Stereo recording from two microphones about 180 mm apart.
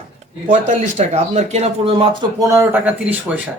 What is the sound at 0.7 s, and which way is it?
Speech, 40° right (ahead or behind).